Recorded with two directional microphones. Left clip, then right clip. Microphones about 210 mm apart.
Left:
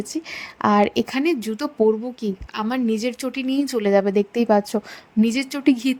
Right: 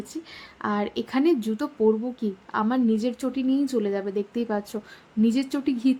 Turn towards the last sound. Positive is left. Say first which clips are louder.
# left 5 dB
turn(degrees=35)  # may be behind; listen again after turning